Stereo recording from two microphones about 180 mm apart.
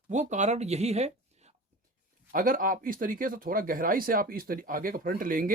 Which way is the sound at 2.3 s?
50° right (ahead or behind).